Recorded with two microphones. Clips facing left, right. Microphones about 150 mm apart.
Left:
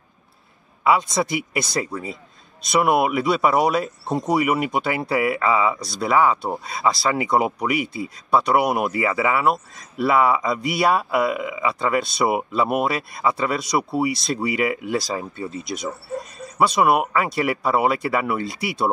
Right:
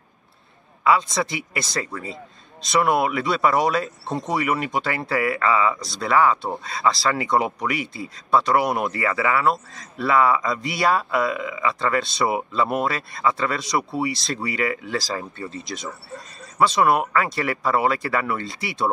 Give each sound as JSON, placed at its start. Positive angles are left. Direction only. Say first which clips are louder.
{"t": 0.8, "sound": "speech", "louder": "left 1 dB", "side_deg": 15}